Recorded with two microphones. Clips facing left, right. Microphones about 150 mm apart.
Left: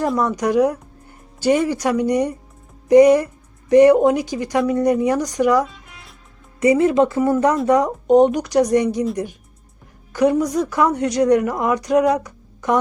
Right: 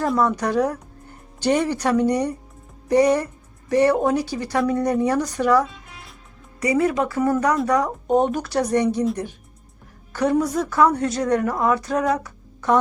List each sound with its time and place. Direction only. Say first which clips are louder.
0.3 s speech: left 4 dB; 15° left (ahead or behind)
10.1 s a woman's voice: left 3 dB; 15° left (ahead or behind)
12.1 s a sound: left 3 dB; 15° left (ahead or behind)